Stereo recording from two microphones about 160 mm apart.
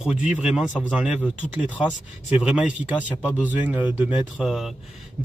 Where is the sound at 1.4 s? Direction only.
10° left (ahead or behind).